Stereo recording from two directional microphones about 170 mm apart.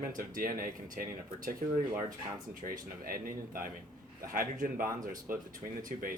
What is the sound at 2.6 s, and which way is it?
Speech, 55° right (ahead or behind).